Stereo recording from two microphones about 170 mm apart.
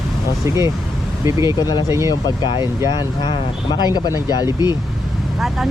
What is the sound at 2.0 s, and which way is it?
Speech, 25° left (ahead or behind).